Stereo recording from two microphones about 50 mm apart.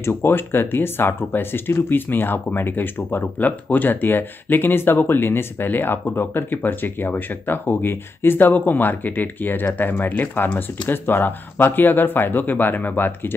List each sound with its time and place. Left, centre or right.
0.0 s speech: left